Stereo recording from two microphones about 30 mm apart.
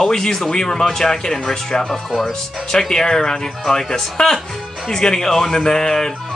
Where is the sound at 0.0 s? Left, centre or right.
Centre.